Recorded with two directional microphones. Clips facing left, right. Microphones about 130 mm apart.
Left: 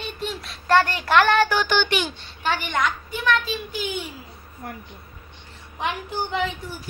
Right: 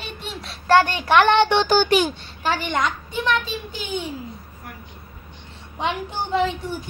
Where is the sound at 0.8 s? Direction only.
25° right (ahead or behind).